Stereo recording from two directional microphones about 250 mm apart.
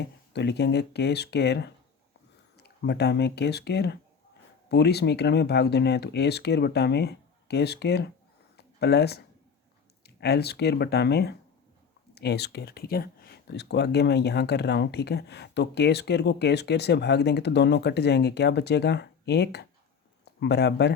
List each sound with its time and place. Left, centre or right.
0.0 s speech: left
8.5 s a sound: left
10.0 s speech: left